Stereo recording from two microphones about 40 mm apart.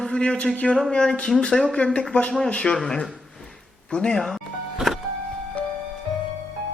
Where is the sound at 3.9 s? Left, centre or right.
Left.